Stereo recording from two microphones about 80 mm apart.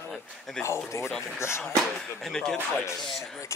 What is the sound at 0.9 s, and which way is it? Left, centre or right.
Speech, left.